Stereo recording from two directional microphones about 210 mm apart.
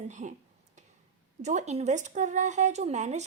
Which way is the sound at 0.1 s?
35° right (ahead or behind).